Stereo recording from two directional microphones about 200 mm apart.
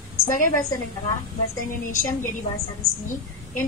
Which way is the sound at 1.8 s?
40° left (ahead or behind).